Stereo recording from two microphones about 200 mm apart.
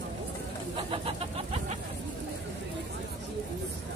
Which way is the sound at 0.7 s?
25° right (ahead or behind).